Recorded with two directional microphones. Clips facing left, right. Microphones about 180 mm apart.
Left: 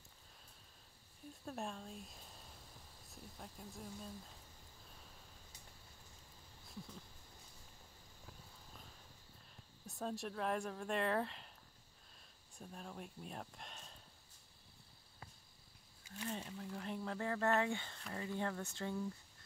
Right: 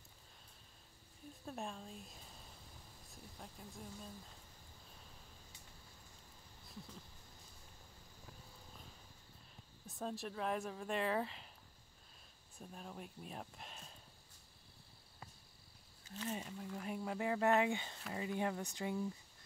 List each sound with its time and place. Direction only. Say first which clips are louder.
1.3 s speech: left 1 dB; centre (ahead or behind)
8.3 s a sound: right 1 dB; centre (ahead or behind)
9.8 s speech: left 1 dB; centre (ahead or behind)
12.5 s speech: even; centre (ahead or behind)
16.3 s speech: right 1 dB; 10° right (ahead or behind)